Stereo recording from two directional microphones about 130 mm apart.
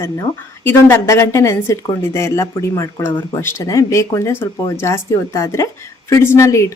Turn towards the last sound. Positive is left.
turn(degrees=25)  # may be behind; listen again after turning